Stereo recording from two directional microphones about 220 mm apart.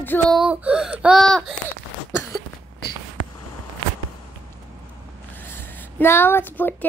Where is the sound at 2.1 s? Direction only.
10° left (ahead or behind).